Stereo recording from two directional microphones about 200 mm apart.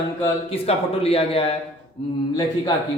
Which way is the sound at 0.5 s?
30° left (ahead or behind).